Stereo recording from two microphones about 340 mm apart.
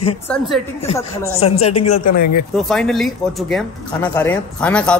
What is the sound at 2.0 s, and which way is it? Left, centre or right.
Speech, left.